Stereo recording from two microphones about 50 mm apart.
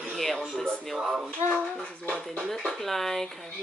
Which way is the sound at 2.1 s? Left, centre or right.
Centre.